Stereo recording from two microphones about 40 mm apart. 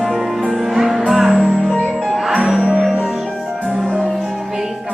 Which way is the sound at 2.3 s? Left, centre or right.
Centre.